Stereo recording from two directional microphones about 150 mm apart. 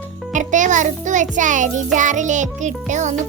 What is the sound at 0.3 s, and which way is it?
Music, 55° right (ahead or behind).